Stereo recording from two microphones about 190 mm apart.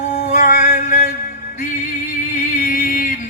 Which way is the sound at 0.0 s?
40° left (ahead or behind).